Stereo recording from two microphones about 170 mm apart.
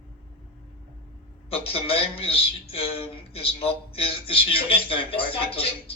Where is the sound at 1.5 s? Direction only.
35° left (ahead or behind).